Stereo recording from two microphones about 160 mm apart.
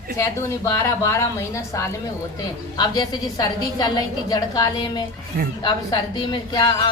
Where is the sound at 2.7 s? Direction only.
25° left (ahead or behind).